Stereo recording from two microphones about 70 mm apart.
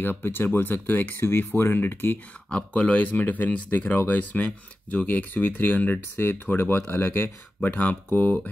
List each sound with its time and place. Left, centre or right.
0.0 s speech: left
2.5 s speech: centre